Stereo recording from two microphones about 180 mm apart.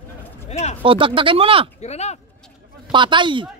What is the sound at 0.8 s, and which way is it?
Speech, 30° right (ahead or behind).